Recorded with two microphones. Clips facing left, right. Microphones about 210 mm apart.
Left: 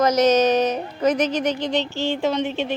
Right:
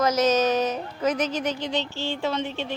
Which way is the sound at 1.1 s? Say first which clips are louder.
Left 5 dB; 5° right (ahead or behind).